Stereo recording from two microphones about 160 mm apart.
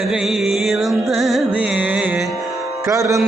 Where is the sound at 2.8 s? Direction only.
20° right (ahead or behind).